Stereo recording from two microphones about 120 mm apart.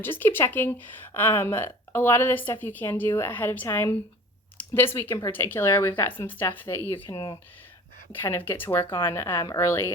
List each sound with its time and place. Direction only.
0.0 s speech: 20° left (ahead or behind)
7.1 s speech: 40° left (ahead or behind)
8.1 s speech: 20° left (ahead or behind)